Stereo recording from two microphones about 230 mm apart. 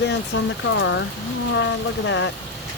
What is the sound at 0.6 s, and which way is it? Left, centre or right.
Speech, left.